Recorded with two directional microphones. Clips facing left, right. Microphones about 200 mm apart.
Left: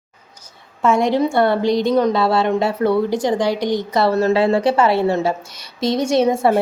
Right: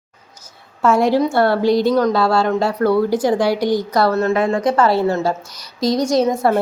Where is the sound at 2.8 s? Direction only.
20° left (ahead or behind).